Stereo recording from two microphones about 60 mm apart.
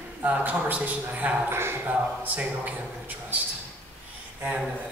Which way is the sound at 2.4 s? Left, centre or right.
Right.